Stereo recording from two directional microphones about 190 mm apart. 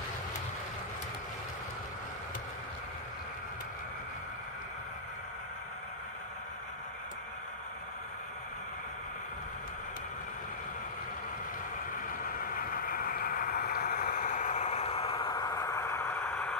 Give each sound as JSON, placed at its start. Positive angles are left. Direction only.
{"t": 12.4, "sound": "vehicle", "side_deg": 50}